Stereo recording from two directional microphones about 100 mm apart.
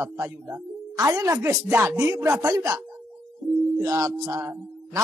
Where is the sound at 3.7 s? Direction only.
35° right (ahead or behind).